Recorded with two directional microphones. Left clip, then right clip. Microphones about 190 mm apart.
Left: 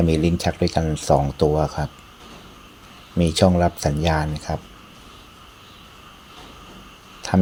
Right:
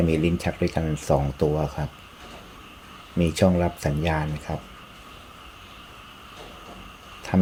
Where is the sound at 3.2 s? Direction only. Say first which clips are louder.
Left 4 dB; 15° left (ahead or behind).